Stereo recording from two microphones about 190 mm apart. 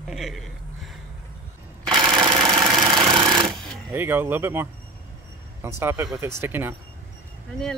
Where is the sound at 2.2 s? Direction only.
25° right (ahead or behind).